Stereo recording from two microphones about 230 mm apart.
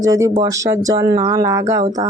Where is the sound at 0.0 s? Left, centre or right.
Centre.